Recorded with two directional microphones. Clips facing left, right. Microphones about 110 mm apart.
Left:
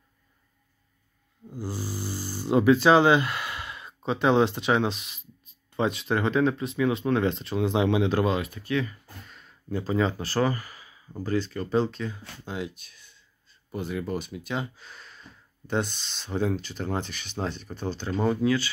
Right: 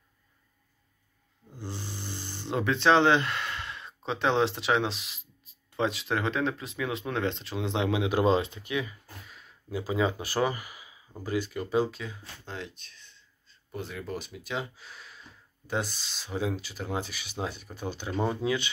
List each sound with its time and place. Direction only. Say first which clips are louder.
1.5 s speech: left 6 dB; 10° left (ahead or behind)
8.3 s speech: right 1 dB; 25° right (ahead or behind)
9.2 s speech: left 2 dB; 5° right (ahead or behind)
12.4 s speech: left 6 dB; 10° left (ahead or behind); by 18.7 s 20° right (ahead or behind)